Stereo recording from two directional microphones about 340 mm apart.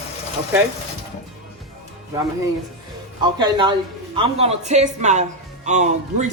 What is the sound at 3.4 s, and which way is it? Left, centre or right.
Speech, centre.